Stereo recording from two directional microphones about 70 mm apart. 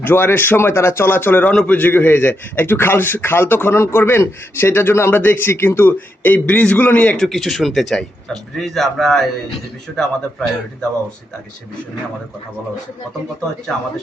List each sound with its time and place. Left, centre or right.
0.0 s a man's voice: left
7.2 s a man's voice: centre